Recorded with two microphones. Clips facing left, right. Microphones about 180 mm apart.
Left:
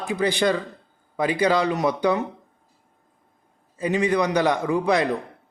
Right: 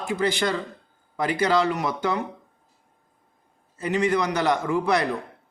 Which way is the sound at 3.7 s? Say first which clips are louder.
Left 2 dB; 15° left (ahead or behind).